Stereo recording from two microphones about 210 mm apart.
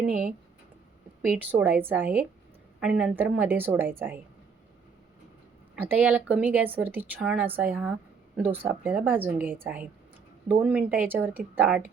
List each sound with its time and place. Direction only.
0.0 s speech: 5° right (ahead or behind)
1.5 s speech: 10° right (ahead or behind)
5.7 s speech: 5° right (ahead or behind)